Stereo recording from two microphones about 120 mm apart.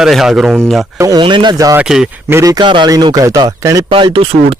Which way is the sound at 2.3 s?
30° right (ahead or behind).